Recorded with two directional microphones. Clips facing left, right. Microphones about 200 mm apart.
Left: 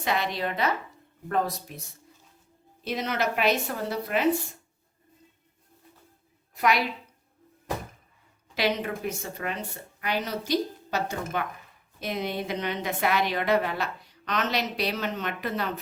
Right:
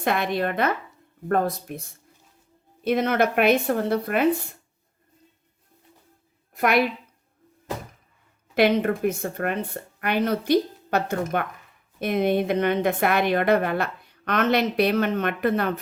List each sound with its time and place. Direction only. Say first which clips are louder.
0.0 s speech: right 4 dB; 55° right (ahead or behind)
2.8 s a woman's voice: right 7 dB; 55° right (ahead or behind)
6.5 s a woman's voice: right 4 dB; 55° right (ahead or behind)
8.5 s a woman's voice: right 8 dB; 55° right (ahead or behind)